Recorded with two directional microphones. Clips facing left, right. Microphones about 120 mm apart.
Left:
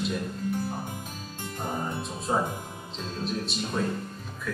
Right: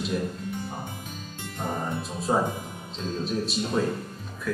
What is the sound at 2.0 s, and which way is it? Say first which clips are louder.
A man's voice: right 4 dB; centre (ahead or behind).